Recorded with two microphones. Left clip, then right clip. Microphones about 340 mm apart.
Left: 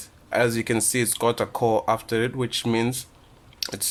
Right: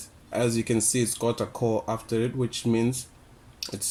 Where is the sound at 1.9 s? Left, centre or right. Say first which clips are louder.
Left 5 dB; left.